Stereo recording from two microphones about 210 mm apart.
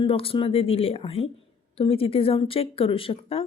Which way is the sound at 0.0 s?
25° left (ahead or behind).